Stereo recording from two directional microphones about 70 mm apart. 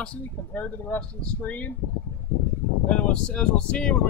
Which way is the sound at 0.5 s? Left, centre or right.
Left.